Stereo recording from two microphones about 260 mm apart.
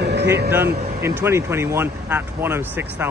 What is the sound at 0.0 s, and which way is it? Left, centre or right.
Vehicle, right.